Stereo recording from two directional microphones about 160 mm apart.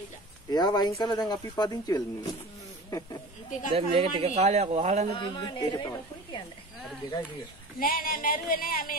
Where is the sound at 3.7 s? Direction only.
40° right (ahead or behind).